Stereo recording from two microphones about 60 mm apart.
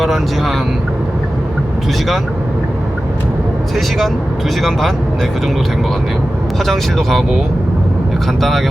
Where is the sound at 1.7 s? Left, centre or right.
Centre.